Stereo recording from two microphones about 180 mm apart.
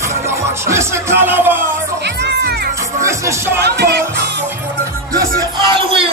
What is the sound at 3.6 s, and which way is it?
Music, 65° right (ahead or behind).